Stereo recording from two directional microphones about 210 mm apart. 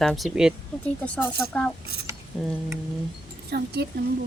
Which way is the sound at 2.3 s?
5° right (ahead or behind).